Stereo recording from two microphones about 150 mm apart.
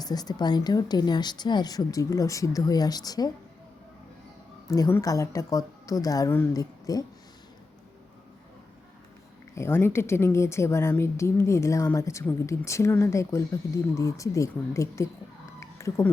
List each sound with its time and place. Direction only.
0.0 s speech: 25° left (ahead or behind)
4.7 s speech: 20° left (ahead or behind)
9.6 s speech: 15° left (ahead or behind)
15.6 s a sound: 20° left (ahead or behind)